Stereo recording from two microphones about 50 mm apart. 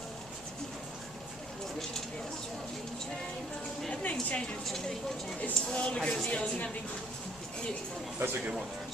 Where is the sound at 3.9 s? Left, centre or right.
Left.